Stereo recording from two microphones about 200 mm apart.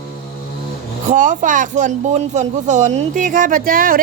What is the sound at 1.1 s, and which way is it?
Speech, 40° right (ahead or behind).